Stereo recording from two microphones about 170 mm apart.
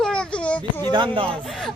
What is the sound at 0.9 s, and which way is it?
Speech, 30° right (ahead or behind).